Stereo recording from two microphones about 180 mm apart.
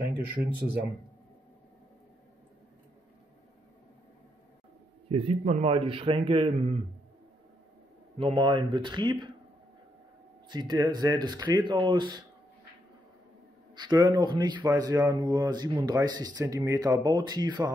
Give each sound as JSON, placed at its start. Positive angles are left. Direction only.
{"t": 0.3, "sound": "speech", "side_deg": -10}
{"t": 5.1, "sound": "speech", "side_deg": -30}
{"t": 8.2, "sound": "speech", "side_deg": -25}
{"t": 10.5, "sound": "speech", "side_deg": -25}
{"t": 13.7, "sound": "speech", "side_deg": -25}